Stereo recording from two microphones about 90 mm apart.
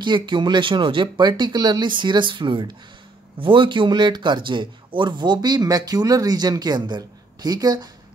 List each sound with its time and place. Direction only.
0.0 s speech: 60° right (ahead or behind)